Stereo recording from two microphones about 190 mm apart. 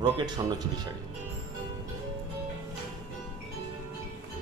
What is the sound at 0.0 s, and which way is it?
Speech, 20° right (ahead or behind).